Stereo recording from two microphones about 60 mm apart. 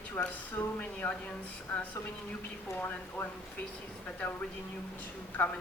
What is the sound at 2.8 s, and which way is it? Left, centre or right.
Speech, left.